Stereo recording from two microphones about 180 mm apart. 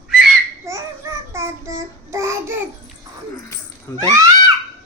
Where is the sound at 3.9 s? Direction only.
15° left (ahead or behind).